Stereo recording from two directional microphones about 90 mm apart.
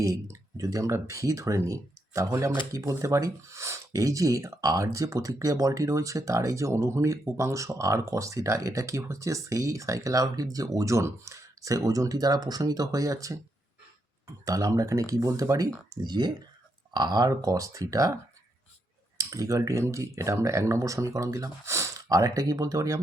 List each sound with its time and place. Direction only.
0.0 s speech: 40° right (ahead or behind)
14.4 s speech: 40° right (ahead or behind)
16.0 s speech: 55° right (ahead or behind); by 18.1 s 40° right (ahead or behind)
19.1 s speech: 40° right (ahead or behind)